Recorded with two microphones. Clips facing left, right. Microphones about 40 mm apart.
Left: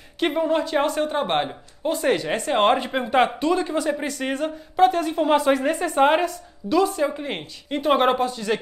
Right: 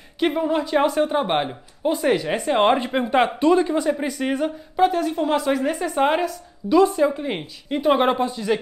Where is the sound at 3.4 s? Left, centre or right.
Centre.